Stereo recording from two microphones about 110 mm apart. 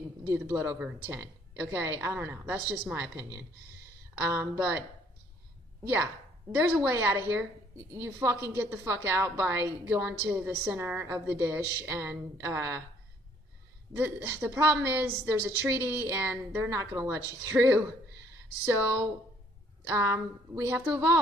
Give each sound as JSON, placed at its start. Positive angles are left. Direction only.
{"t": 0.3, "sound": "a woman's voice", "side_deg": -25}
{"t": 6.6, "sound": "a woman's voice", "side_deg": -15}
{"t": 13.9, "sound": "a woman's voice", "side_deg": -20}